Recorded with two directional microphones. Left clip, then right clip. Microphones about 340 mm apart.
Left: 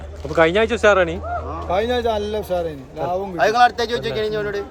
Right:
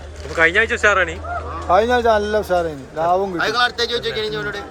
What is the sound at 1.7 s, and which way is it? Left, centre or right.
A man's voice, centre.